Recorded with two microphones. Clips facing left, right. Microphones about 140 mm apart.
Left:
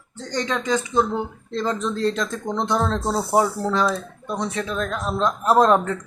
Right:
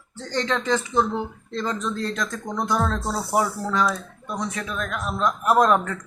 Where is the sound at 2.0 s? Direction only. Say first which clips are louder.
Left 5 dB; 30° left (ahead or behind).